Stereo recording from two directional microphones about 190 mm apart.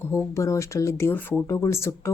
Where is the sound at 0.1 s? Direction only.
15° left (ahead or behind).